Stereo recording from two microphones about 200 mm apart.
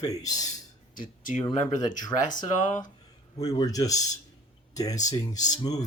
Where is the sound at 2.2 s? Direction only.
40° left (ahead or behind).